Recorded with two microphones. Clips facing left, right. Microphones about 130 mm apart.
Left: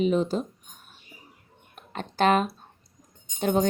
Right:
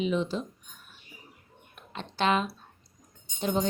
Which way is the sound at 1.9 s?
45° left (ahead or behind).